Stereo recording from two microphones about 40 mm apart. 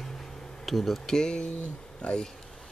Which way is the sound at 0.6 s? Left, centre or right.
Centre.